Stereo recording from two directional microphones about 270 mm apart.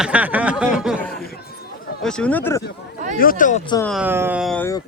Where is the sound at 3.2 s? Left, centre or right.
Left.